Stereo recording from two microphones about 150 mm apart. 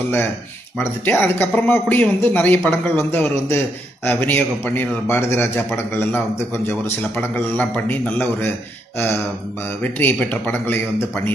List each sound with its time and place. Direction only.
0.7 s speech: 10° left (ahead or behind)